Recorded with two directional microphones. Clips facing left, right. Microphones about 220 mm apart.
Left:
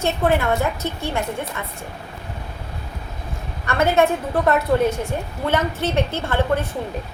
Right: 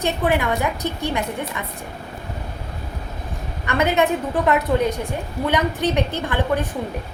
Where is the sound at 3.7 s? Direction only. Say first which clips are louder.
Left 1 dB; 20° right (ahead or behind).